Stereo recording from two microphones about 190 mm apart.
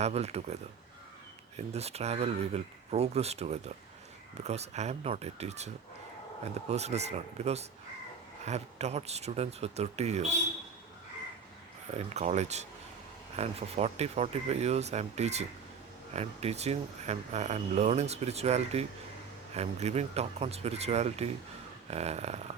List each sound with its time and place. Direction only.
0.0 s speech: 35° right (ahead or behind)
11.9 s speech: 35° right (ahead or behind)